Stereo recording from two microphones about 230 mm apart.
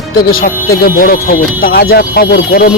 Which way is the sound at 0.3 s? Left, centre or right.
Left.